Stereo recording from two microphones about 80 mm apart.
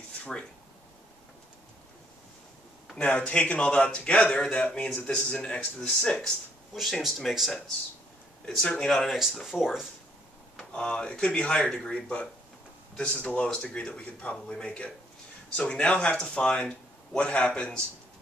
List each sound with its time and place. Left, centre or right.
0.2 s speech: centre
3.0 s a man's voice: centre
6.8 s speech: centre
10.6 s a man's voice: centre